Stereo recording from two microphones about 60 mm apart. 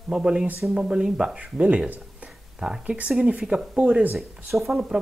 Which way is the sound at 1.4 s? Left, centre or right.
Right.